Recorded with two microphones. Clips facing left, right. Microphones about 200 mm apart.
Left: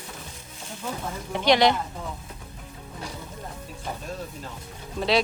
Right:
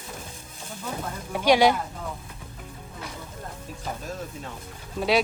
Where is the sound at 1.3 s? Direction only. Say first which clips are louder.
Right 1 dB; 10° right (ahead or behind).